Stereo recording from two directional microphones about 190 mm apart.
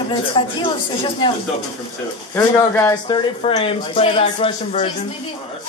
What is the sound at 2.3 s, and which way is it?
Speech, 10° left (ahead or behind).